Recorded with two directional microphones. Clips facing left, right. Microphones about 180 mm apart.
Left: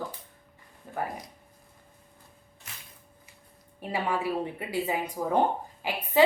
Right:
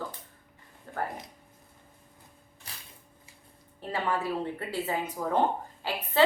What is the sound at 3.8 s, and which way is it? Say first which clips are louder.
A woman's voice: left 1 dB; 10° left (ahead or behind).